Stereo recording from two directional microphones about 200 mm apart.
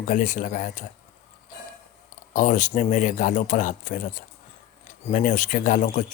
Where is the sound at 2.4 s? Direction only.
40° left (ahead or behind).